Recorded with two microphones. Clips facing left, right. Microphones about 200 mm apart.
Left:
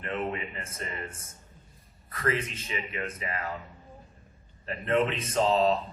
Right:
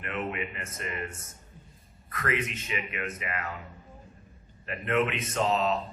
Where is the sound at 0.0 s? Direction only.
30° left (ahead or behind).